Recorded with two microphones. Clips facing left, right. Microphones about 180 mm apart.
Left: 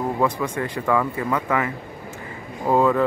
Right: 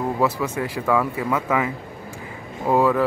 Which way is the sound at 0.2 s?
10° right (ahead or behind).